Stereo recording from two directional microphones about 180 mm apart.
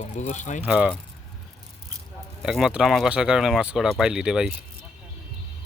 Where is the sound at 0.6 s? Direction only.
5° right (ahead or behind).